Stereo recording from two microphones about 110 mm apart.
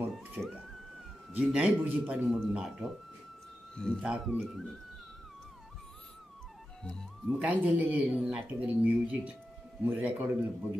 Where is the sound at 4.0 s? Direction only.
10° right (ahead or behind).